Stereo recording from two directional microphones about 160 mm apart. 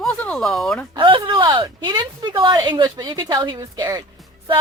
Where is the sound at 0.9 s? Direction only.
25° right (ahead or behind).